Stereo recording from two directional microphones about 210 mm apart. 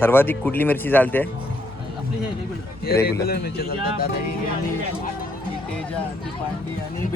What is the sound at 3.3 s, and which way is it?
Speech, 50° left (ahead or behind).